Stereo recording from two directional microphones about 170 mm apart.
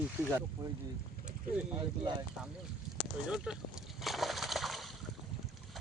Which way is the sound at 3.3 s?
5° right (ahead or behind).